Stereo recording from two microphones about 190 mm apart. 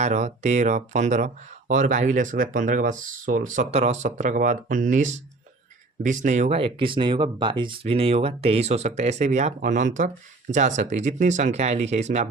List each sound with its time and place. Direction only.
0.0 s speech: 35° right (ahead or behind)